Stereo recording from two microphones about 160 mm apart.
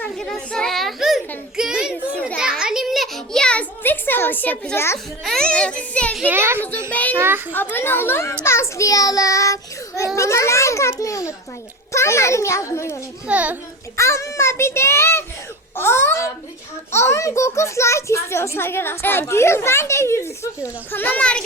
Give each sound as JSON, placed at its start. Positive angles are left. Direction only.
{"t": 0.0, "sound": "children playing", "side_deg": 5}
{"t": 1.5, "sound": "a sound", "side_deg": -5}
{"t": 5.2, "sound": "a child's voice", "side_deg": 5}
{"t": 6.2, "sound": "a child's voice", "side_deg": -15}
{"t": 6.9, "sound": "a child's voice", "side_deg": 10}
{"t": 7.2, "sound": "a child's voice", "side_deg": -15}
{"t": 7.5, "sound": "a child's voice", "side_deg": 10}
{"t": 13.2, "sound": "a child's voice", "side_deg": -10}
{"t": 13.9, "sound": "a child's voice", "side_deg": 15}